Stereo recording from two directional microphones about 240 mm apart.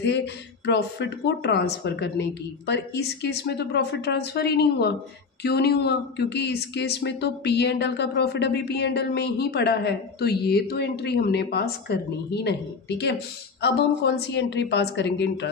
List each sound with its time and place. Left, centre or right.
0.0 s speech: left